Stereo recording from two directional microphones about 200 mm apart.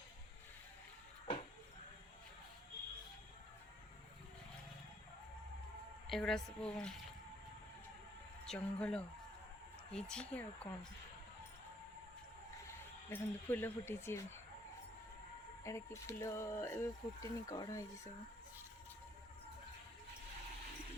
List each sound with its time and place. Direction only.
6.1 s a woman's voice: centre (ahead or behind)
8.4 s a woman's voice: 5° left (ahead or behind)
13.1 s speech: 10° left (ahead or behind)
15.6 s speech: 15° left (ahead or behind)